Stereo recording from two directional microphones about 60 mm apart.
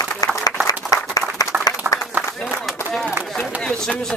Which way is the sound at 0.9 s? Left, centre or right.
Left.